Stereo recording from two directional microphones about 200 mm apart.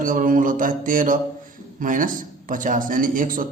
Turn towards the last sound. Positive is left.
turn(degrees=-45)  # may be behind; listen again after turning